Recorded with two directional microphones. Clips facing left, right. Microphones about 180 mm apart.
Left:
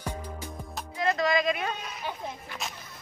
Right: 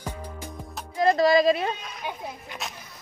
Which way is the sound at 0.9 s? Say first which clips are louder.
Right 7 dB; 35° right (ahead or behind).